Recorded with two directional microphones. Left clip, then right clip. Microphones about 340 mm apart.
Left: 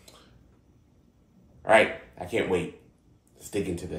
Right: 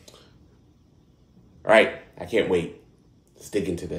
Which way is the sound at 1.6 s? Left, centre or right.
Centre.